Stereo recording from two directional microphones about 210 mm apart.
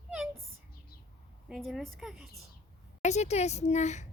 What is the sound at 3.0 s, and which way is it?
Speech, 35° left (ahead or behind).